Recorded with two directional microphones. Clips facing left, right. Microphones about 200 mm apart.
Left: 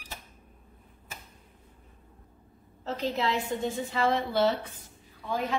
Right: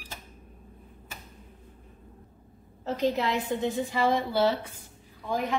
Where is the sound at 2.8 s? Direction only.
15° right (ahead or behind).